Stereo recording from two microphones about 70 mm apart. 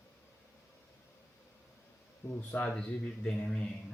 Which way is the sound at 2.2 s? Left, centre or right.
Left.